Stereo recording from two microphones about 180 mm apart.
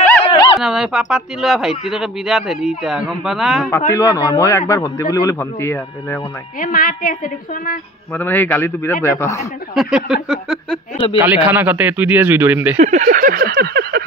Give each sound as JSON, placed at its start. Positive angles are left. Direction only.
{"t": 0.3, "sound": "a sound", "side_deg": 25}
{"t": 0.6, "sound": "speech", "side_deg": -5}
{"t": 3.9, "sound": "a man's voice", "side_deg": 20}
{"t": 6.6, "sound": "a woman's voice", "side_deg": 50}
{"t": 8.2, "sound": "a man's voice", "side_deg": 10}
{"t": 9.8, "sound": "a man's voice", "side_deg": -5}
{"t": 12.7, "sound": "a sound", "side_deg": -40}